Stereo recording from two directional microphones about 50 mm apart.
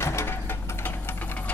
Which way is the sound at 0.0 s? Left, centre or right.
Left.